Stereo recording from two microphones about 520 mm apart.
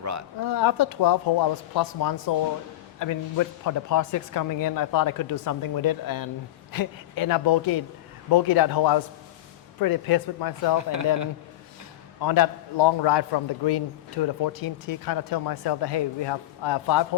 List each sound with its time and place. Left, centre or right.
0.4 s speech: left
10.8 s speech: right
12.2 s speech: left